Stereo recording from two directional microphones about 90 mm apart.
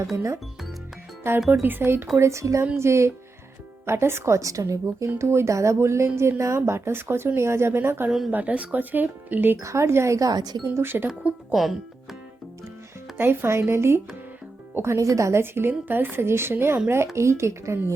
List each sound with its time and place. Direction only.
1.2 s a woman's voice: 30° right (ahead or behind); by 10.6 s 50° right (ahead or behind)
10.8 s speech: 25° right (ahead or behind)
11.5 s speech: centre (ahead or behind)
13.1 s a woman's voice: 25° right (ahead or behind)